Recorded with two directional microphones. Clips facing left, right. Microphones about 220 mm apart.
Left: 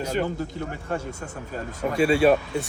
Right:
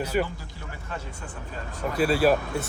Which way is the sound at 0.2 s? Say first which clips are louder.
Left 3 dB; 45° left (ahead or behind).